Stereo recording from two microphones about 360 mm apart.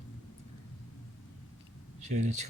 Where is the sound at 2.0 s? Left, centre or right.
Centre.